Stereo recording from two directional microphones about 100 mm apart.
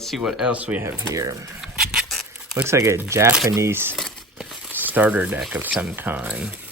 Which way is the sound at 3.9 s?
5° left (ahead or behind).